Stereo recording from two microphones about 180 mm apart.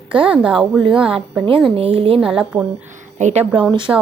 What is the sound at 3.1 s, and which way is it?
Speech, 40° right (ahead or behind).